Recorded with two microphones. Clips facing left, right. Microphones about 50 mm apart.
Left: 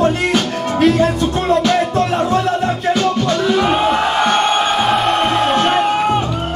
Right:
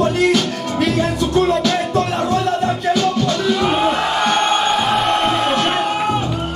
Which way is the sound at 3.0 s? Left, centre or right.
Left.